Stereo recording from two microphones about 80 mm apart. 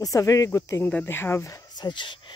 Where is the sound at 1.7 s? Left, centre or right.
Left.